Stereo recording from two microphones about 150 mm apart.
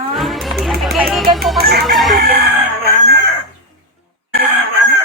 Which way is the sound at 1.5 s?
90° right.